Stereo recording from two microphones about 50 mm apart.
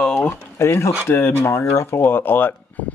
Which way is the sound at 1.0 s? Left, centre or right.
Left.